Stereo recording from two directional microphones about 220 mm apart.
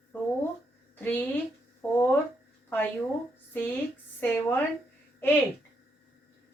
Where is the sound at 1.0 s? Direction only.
10° left (ahead or behind).